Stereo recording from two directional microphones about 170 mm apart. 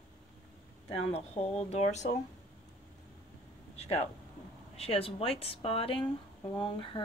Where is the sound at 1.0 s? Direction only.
35° left (ahead or behind).